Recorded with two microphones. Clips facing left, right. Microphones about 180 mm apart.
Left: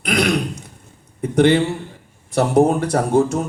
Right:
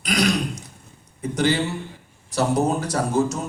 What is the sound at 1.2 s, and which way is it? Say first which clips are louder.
A man's voice: left 7 dB; 55° left (ahead or behind).